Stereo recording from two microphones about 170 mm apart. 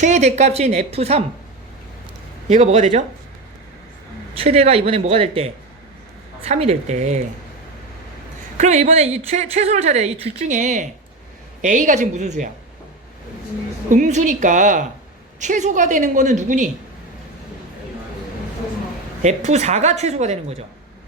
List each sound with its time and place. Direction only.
0.0 s a woman's voice: 40° right (ahead or behind)
2.5 s a woman's voice: 45° right (ahead or behind)
4.4 s a woman's voice: 40° right (ahead or behind)
8.5 s a woman's voice: 45° right (ahead or behind)
13.9 s a woman's voice: 45° right (ahead or behind)
19.2 s a woman's voice: 40° right (ahead or behind)